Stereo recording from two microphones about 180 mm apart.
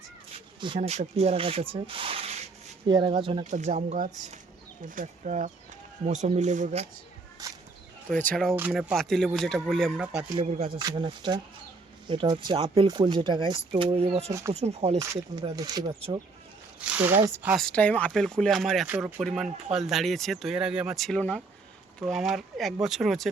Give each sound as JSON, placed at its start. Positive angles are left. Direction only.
{"t": 0.8, "sound": "speech", "side_deg": -40}
{"t": 3.4, "sound": "speech", "side_deg": -40}
{"t": 8.5, "sound": "speech", "side_deg": -5}
{"t": 10.4, "sound": "speech", "side_deg": -40}
{"t": 10.8, "sound": "speech", "side_deg": -25}
{"t": 14.9, "sound": "speech", "side_deg": -20}
{"t": 16.8, "sound": "speech", "side_deg": -10}
{"t": 17.7, "sound": "speech", "side_deg": 5}